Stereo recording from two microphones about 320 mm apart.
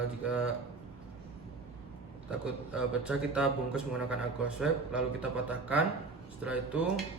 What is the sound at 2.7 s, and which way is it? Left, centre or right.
A man's voice, centre.